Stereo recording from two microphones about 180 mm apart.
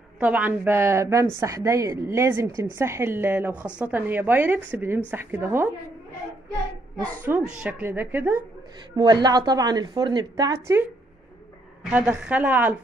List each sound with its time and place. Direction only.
0.2 s a woman's voice: 10° right (ahead or behind)
7.2 s a woman's voice: 10° right (ahead or behind)
8.9 s a woman's voice: 25° right (ahead or behind)
11.9 s a woman's voice: 5° right (ahead or behind)